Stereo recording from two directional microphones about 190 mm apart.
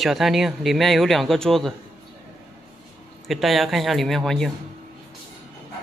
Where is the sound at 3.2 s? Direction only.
Centre (ahead or behind).